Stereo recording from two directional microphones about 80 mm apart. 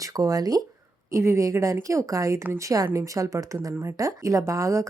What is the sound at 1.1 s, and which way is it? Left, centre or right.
Speech, right.